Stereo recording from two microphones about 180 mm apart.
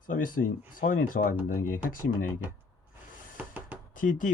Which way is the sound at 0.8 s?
50° left (ahead or behind).